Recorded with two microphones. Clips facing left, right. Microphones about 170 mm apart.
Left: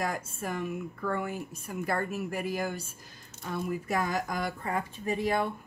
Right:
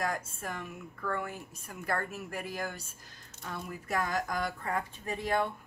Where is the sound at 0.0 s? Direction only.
10° left (ahead or behind).